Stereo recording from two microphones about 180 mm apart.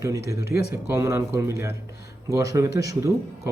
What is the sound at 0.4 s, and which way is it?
Speech, 60° left (ahead or behind).